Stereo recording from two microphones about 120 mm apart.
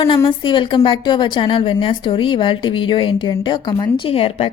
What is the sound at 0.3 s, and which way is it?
A woman's voice, 45° left (ahead or behind).